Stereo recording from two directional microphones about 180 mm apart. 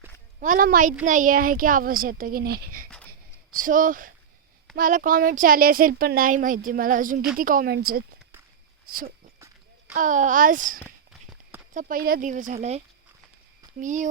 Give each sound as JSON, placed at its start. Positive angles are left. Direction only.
{"t": 0.3, "sound": "speech", "side_deg": -50}
{"t": 3.1, "sound": "a sound", "side_deg": -50}
{"t": 4.8, "sound": "a woman's voice", "side_deg": -45}
{"t": 9.9, "sound": "speech", "side_deg": -45}
{"t": 10.8, "sound": "walk", "side_deg": 5}
{"t": 11.7, "sound": "speech", "side_deg": -45}
{"t": 13.7, "sound": "speech", "side_deg": -45}